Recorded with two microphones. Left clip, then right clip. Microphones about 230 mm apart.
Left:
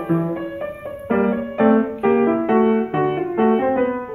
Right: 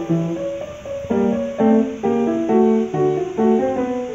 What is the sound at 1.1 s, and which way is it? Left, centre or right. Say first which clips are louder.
Music: even; centre.